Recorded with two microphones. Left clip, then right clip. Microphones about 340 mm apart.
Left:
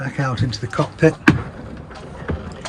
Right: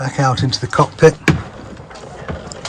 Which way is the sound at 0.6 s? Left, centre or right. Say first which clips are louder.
Right 7 dB; right.